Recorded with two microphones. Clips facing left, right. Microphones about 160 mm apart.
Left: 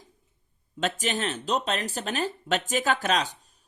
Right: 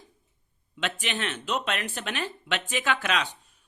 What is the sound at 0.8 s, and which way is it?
Speech, 40° left (ahead or behind).